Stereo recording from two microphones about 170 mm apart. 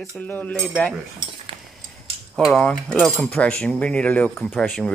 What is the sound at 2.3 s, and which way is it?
Speech, 5° left (ahead or behind).